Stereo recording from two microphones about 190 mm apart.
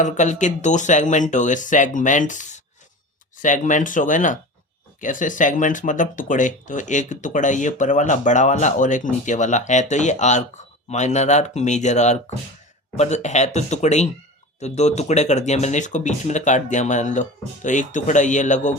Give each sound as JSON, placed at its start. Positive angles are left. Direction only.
{"t": 0.0, "sound": "speech", "side_deg": 40}